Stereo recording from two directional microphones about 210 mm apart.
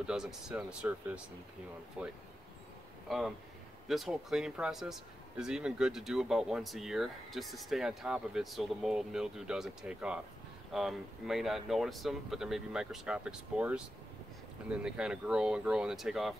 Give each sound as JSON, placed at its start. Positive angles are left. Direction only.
{"t": 0.0, "sound": "speech", "side_deg": -5}